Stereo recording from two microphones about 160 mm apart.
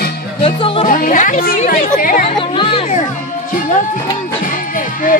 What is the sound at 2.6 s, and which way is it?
Music, 35° left (ahead or behind).